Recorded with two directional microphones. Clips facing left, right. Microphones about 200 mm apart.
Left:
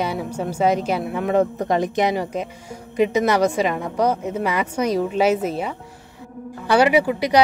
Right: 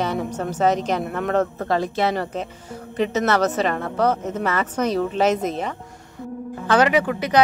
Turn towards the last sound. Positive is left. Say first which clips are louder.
# left 2 dB
turn(degrees=10)  # may be behind; listen again after turning